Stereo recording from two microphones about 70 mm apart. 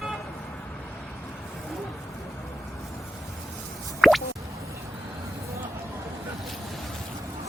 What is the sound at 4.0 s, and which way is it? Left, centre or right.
Music, centre.